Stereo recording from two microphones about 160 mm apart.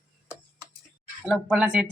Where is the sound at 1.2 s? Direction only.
5° right (ahead or behind).